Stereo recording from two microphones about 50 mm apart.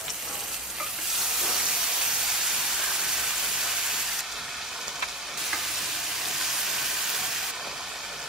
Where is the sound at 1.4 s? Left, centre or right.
Centre.